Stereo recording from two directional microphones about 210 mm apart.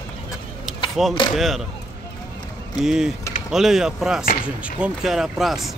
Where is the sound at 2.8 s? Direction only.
5° right (ahead or behind).